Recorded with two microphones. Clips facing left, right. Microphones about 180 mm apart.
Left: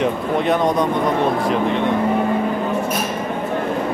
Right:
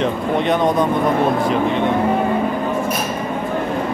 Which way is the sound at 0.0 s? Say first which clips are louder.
Even; centre (ahead or behind).